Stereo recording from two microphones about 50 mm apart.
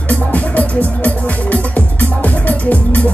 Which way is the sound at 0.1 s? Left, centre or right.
Left.